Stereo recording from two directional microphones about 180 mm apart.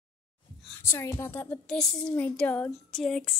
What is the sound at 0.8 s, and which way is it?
A woman's voice, 15° left (ahead or behind).